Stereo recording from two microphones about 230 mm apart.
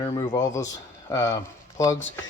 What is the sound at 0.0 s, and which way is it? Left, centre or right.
Speech, centre.